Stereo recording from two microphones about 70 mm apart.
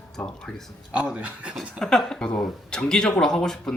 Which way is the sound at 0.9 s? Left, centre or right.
Centre.